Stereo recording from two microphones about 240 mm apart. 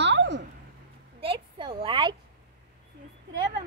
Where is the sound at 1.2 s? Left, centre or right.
Right.